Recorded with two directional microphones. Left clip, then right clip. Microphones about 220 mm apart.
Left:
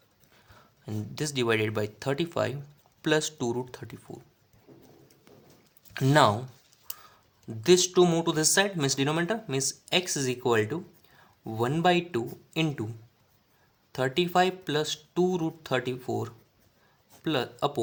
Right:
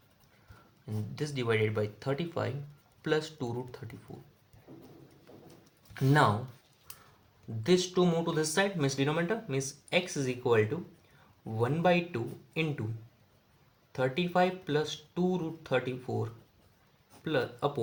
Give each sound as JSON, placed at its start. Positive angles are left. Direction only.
{"t": 0.9, "sound": "speech", "side_deg": 45}
{"t": 5.9, "sound": "speech", "side_deg": 40}
{"t": 7.6, "sound": "speech", "side_deg": 45}
{"t": 13.9, "sound": "speech", "side_deg": 45}